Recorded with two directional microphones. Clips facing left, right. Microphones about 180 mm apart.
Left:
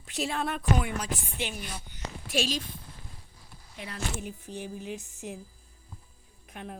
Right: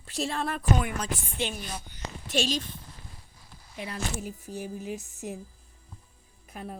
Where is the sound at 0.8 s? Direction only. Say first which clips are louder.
Right 1 dB; 15° left (ahead or behind).